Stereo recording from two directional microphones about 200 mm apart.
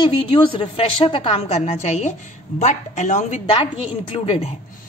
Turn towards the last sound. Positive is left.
turn(degrees=30)  # may be behind; listen again after turning